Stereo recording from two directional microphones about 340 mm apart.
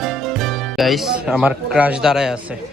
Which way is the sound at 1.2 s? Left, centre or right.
Centre.